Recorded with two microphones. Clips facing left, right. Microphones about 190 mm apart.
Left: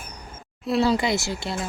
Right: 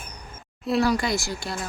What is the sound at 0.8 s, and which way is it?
Speech, 20° left (ahead or behind).